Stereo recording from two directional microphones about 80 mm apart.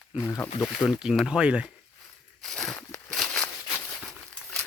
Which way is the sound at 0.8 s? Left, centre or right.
Left.